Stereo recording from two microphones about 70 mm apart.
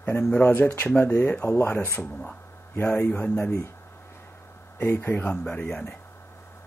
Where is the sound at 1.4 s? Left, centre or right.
Left.